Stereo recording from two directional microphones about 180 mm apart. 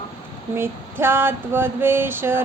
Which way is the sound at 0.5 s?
15° right (ahead or behind).